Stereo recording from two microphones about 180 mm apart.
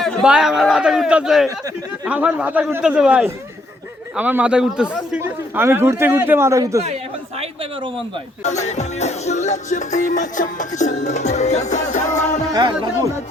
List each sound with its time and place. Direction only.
0.0 s a man's voice: 5° right (ahead or behind)
6.8 s speech: 35° right (ahead or behind)
8.4 s music: 40° left (ahead or behind)